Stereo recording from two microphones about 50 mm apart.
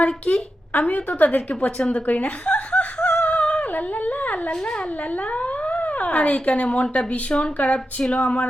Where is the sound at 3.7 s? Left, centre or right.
Left.